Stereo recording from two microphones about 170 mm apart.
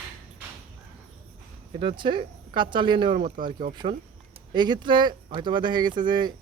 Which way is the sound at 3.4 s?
50° right (ahead or behind).